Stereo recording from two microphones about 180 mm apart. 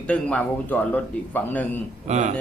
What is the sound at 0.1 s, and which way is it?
A man's voice, 10° left (ahead or behind).